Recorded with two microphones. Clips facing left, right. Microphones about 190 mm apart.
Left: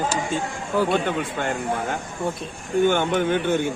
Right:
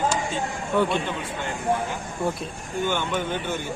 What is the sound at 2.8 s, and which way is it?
Speech, 55° left (ahead or behind).